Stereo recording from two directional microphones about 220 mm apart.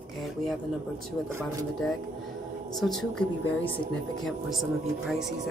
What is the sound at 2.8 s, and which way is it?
Speech, centre (ahead or behind).